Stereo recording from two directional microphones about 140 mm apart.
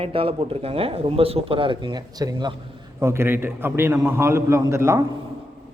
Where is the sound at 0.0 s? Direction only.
40° right (ahead or behind).